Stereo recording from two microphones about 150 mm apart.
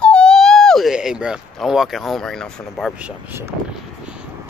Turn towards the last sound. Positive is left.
turn(degrees=-10)  # may be behind; listen again after turning